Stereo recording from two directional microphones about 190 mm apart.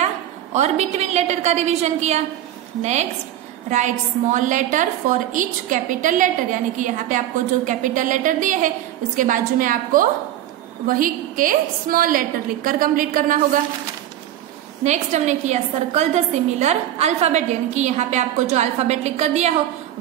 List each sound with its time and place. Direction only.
0.0 s a woman's voice: 35° right (ahead or behind)
14.8 s a woman's voice: 40° right (ahead or behind)